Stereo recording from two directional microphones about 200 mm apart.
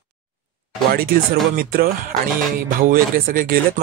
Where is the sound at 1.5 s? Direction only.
45° right (ahead or behind).